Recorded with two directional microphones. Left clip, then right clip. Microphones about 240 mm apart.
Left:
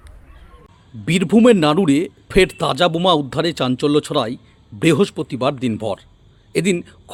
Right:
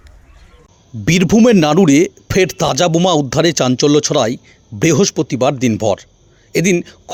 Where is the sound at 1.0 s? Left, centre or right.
Right.